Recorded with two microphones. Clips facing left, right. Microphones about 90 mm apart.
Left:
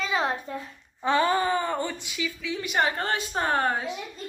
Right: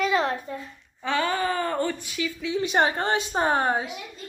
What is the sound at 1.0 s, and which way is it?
Speech, 30° left (ahead or behind).